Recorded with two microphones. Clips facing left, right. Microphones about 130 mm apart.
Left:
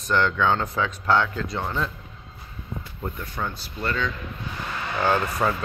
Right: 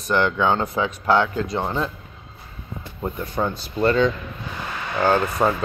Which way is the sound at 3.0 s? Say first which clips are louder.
Right 7 dB; 20° right (ahead or behind).